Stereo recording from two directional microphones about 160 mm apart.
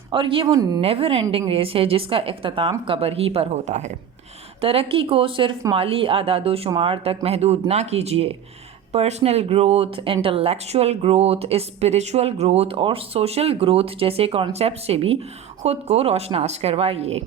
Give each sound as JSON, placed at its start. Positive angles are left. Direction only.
{"t": 0.1, "sound": "speech", "side_deg": -30}
{"t": 0.8, "sound": "speech", "side_deg": -35}
{"t": 4.6, "sound": "speech", "side_deg": -35}